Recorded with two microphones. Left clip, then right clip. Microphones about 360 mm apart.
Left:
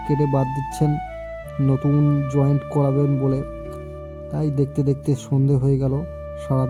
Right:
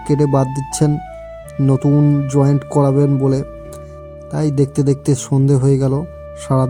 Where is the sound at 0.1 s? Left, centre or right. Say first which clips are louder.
Right 6 dB; left.